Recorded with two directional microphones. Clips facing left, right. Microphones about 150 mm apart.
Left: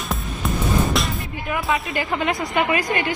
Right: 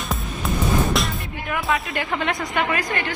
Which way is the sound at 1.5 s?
5° left (ahead or behind).